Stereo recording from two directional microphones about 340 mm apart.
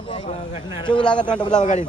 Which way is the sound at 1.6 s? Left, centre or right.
Left.